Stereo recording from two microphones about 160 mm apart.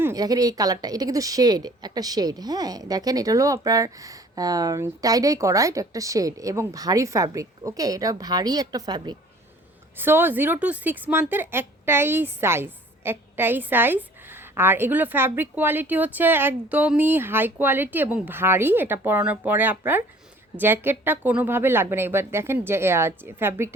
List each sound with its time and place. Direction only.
0.0 s a woman's voice: 20° right (ahead or behind)
10.0 s speech: 15° right (ahead or behind)